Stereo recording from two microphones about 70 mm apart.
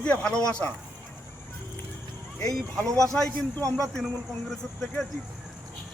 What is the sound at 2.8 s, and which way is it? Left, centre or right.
A man's voice, right.